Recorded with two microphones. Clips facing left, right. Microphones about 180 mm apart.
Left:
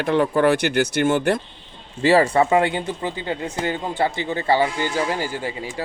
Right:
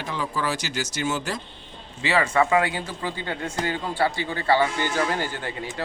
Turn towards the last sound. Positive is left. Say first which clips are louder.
# left 3 dB
turn(degrees=10)  # may be behind; listen again after turning